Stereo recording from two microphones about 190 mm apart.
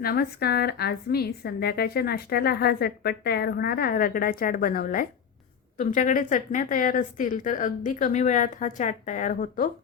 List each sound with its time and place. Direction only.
0.0 s a woman's voice: 55° left (ahead or behind)